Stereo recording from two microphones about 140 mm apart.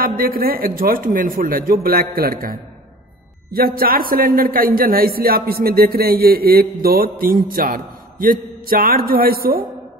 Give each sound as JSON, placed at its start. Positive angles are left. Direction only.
{"t": 0.0, "sound": "a man's voice", "side_deg": -90}
{"t": 3.5, "sound": "a man's voice", "side_deg": -90}